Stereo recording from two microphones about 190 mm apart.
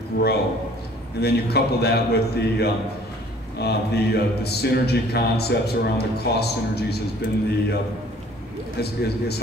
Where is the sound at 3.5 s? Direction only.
60° left (ahead or behind).